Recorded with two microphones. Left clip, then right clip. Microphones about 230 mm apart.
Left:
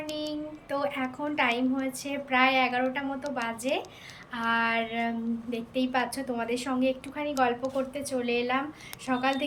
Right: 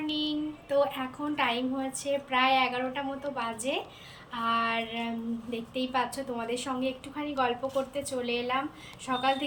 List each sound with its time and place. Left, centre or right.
0.1 s a woman's voice: centre